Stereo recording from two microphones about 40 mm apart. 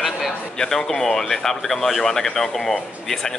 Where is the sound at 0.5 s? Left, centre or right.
Centre.